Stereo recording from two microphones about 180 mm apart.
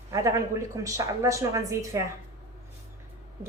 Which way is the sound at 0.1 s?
20° right (ahead or behind).